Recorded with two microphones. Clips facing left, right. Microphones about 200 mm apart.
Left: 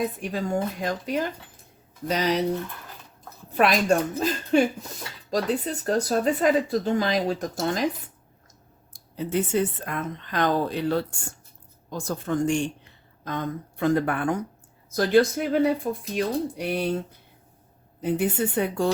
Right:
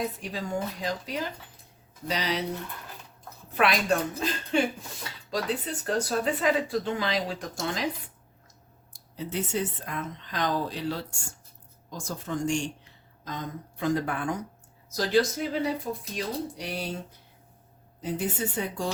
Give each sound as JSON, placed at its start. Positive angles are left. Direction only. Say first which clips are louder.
{"t": 0.2, "sound": "speech", "louder": "left 5 dB", "side_deg": 50}
{"t": 3.6, "sound": "speech", "louder": "left 4 dB", "side_deg": 45}
{"t": 8.9, "sound": "speech", "louder": "left 7 dB", "side_deg": 55}
{"t": 18.0, "sound": "speech", "louder": "left 6 dB", "side_deg": 60}